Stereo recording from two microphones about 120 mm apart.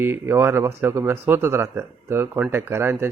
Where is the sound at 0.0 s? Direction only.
20° right (ahead or behind).